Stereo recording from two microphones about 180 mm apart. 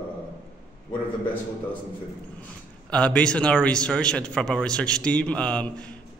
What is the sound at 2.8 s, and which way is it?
A man's voice, 5° left (ahead or behind).